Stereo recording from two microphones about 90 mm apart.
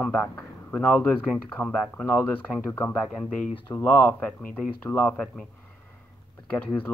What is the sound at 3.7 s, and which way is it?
Speech, 50° left (ahead or behind).